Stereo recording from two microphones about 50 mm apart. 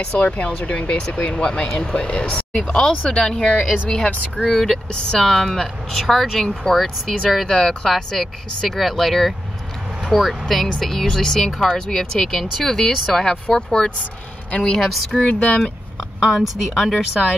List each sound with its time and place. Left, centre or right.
0.1 s speech: left
4.5 s speech: centre
13.6 s speech: centre
15.2 s speech: left
16.3 s speech: centre